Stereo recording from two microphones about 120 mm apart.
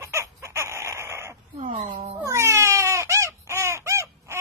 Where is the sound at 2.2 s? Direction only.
25° right (ahead or behind).